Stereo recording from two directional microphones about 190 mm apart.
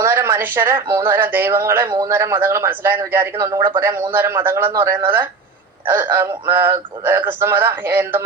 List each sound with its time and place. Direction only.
0.0 s speech: 10° right (ahead or behind)